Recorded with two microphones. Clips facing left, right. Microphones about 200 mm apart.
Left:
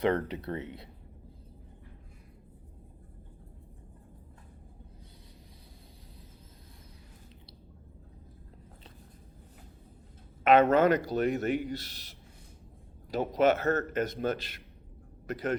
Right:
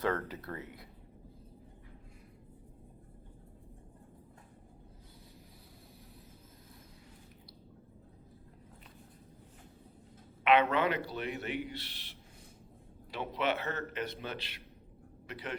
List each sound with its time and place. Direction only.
0.0 s speech: 20° left (ahead or behind)
10.4 s a man's voice: 45° left (ahead or behind)